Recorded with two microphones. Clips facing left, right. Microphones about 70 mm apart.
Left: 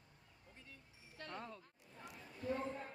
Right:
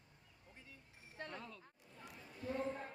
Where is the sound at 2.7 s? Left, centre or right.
Centre.